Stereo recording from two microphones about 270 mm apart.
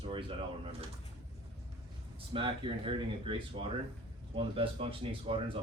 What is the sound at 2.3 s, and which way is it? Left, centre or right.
Speech, centre.